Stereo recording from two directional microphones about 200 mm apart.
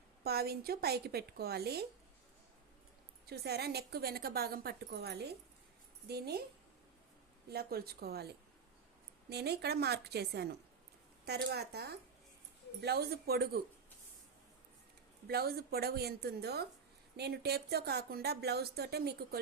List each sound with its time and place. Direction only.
0.3 s speech: 50° right (ahead or behind)
3.2 s speech: 55° right (ahead or behind)
7.5 s a woman's voice: 50° right (ahead or behind)
15.3 s speech: 50° right (ahead or behind)